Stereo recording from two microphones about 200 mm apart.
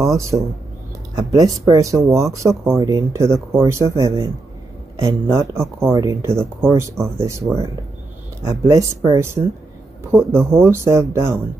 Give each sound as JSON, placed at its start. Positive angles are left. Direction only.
{"t": 0.0, "sound": "speech", "side_deg": -15}